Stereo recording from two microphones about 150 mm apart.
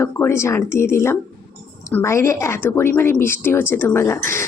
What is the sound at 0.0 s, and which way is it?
A woman's voice, 15° left (ahead or behind).